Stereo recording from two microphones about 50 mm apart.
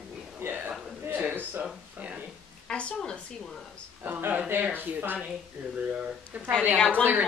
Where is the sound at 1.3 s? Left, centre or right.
Right.